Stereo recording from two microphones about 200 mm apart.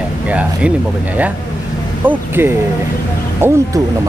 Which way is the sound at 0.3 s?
5° right (ahead or behind).